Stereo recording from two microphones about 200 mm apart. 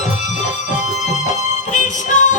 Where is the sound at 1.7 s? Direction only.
40° left (ahead or behind).